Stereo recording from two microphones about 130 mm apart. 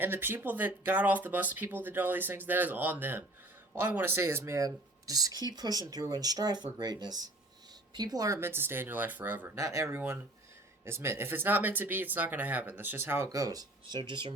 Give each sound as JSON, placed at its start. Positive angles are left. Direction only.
{"t": 0.0, "sound": "speech", "side_deg": -15}
{"t": 9.6, "sound": "speech", "side_deg": -25}